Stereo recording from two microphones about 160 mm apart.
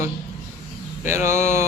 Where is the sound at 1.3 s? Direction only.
45° left (ahead or behind).